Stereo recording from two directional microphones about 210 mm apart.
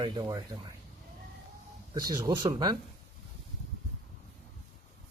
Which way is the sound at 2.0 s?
20° right (ahead or behind).